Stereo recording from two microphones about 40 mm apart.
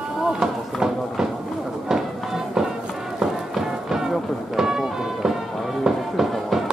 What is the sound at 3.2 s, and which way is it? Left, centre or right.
Music, centre.